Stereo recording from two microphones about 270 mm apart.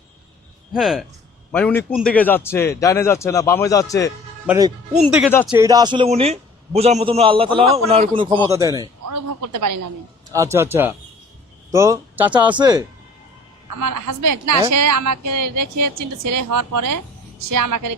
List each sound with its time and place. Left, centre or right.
0.7 s a man's voice: centre
4.4 s a man's voice: centre
9.0 s a woman's voice: right
10.3 s speech: centre
13.7 s a woman's voice: right